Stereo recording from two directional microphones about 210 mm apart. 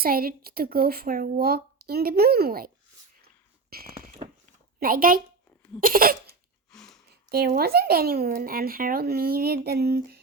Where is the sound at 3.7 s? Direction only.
45° right (ahead or behind).